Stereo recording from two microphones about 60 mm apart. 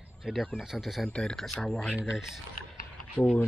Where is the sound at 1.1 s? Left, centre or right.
Centre.